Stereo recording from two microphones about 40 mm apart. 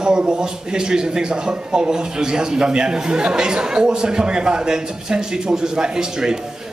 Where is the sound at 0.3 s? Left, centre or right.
Centre.